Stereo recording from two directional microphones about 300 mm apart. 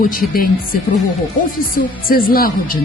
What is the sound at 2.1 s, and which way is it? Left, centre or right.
Speech, left.